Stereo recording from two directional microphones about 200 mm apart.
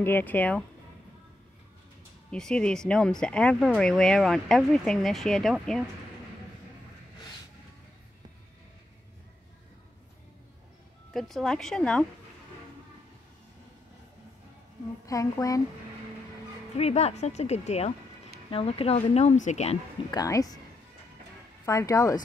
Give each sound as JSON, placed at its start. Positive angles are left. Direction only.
{"t": 0.0, "sound": "speech", "side_deg": 10}
{"t": 2.3, "sound": "speech", "side_deg": 5}
{"t": 11.1, "sound": "speech", "side_deg": 0}
{"t": 15.0, "sound": "speech", "side_deg": 15}
{"t": 16.7, "sound": "a woman's voice", "side_deg": 30}
{"t": 20.1, "sound": "speech", "side_deg": 20}
{"t": 21.6, "sound": "speech", "side_deg": 15}